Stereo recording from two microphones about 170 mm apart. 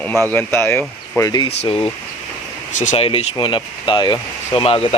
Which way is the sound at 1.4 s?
35° left (ahead or behind).